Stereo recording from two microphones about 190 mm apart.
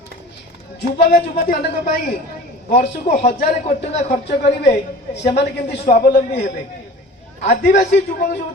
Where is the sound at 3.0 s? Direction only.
50° left (ahead or behind).